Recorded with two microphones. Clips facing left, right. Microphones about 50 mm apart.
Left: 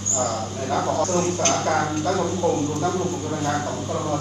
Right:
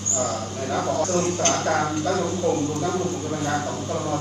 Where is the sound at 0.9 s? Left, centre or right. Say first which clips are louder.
Left 1 dB; left.